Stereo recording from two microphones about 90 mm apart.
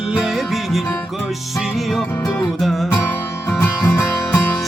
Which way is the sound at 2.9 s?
20° left (ahead or behind).